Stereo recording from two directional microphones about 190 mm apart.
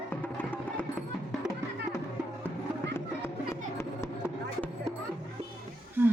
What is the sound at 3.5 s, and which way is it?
Music, 15° left (ahead or behind).